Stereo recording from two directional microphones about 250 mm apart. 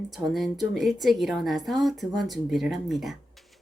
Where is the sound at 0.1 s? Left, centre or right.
Centre.